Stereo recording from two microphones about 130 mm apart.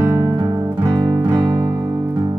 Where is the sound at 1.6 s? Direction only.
20° right (ahead or behind).